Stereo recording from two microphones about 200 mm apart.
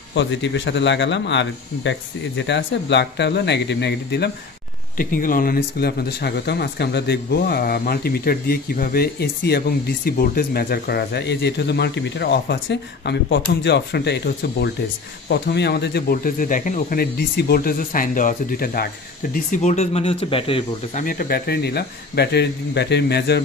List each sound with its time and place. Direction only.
0.1 s speech: 65° left (ahead or behind)
4.9 s speech: 45° left (ahead or behind); by 21.0 s 25° left (ahead or behind)
21.0 s speech: 45° left (ahead or behind)